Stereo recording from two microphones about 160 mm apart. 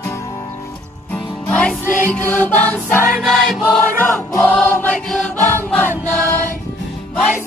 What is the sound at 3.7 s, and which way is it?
Choir, 15° left (ahead or behind).